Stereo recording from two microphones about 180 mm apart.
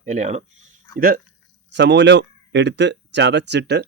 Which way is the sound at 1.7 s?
75° right (ahead or behind).